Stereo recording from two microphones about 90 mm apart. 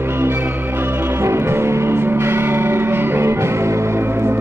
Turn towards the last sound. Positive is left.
turn(degrees=-25)  # may be behind; listen again after turning